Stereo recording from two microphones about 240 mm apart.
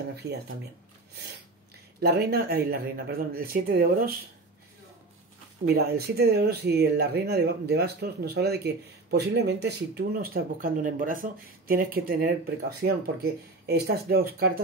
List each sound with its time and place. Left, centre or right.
0.1 s speech: right
2.0 s speech: right
5.6 s speech: right